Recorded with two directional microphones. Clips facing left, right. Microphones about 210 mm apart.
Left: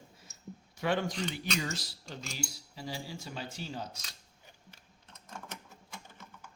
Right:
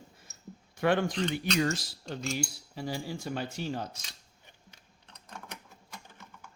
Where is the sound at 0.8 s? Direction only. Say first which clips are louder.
Right 5 dB; 55° right (ahead or behind).